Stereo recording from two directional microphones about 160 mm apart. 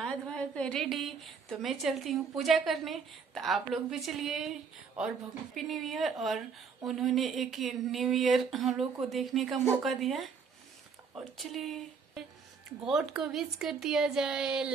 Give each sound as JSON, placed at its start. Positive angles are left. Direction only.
{"t": 0.0, "sound": "a woman's voice", "side_deg": 5}